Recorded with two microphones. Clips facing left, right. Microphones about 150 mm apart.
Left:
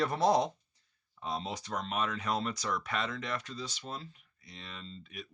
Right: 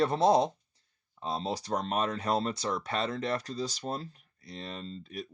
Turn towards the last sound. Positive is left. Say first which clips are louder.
# right 6 dB
turn(degrees=-35)  # may be behind; listen again after turning